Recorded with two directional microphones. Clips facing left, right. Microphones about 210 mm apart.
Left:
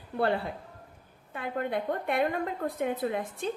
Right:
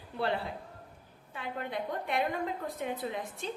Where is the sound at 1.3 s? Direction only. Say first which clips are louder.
Left 5 dB; 55° left (ahead or behind).